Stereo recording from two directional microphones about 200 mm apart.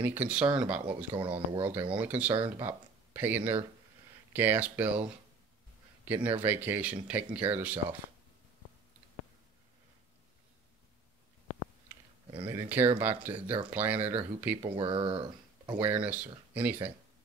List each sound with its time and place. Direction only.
0.0 s speech: 10° right (ahead or behind)
1.1 s speech: 25° right (ahead or behind)
1.6 s speech: 10° right (ahead or behind)
6.0 s a man's voice: 10° right (ahead or behind)
12.4 s speech: 10° right (ahead or behind)
14.6 s speech: 25° right (ahead or behind)
15.8 s speech: 5° right (ahead or behind)